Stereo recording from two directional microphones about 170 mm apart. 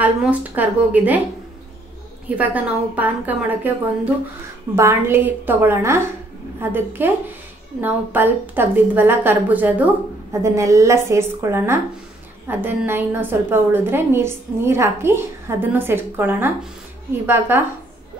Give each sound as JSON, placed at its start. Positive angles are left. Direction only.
{"t": 0.0, "sound": "a woman's voice", "side_deg": -10}
{"t": 2.2, "sound": "a woman's voice", "side_deg": -10}